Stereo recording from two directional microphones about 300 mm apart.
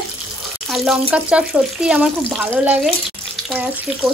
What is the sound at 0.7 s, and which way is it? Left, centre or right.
Speech, centre.